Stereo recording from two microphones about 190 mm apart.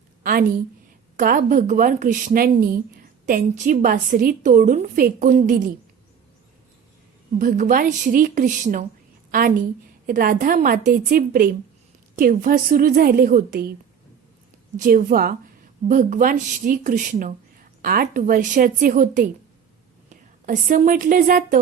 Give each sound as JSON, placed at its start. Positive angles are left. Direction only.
{"t": 0.2, "sound": "a woman's voice", "side_deg": -50}
{"t": 7.3, "sound": "a woman's voice", "side_deg": -45}
{"t": 14.8, "sound": "a woman's voice", "side_deg": -50}
{"t": 20.4, "sound": "a woman's voice", "side_deg": -45}